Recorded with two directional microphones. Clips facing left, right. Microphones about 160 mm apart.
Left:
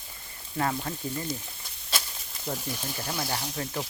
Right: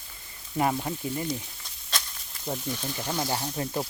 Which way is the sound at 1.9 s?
5° left (ahead or behind).